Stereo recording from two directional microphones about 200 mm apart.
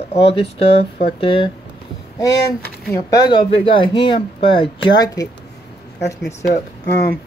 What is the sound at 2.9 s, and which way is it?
Speech, 20° left (ahead or behind).